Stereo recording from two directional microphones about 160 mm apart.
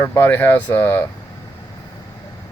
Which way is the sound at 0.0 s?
15° left (ahead or behind).